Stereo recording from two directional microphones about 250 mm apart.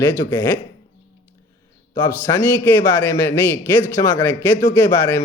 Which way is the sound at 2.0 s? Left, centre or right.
Centre.